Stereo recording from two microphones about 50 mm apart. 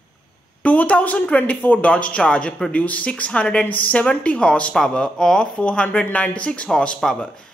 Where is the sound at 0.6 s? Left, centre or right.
Left.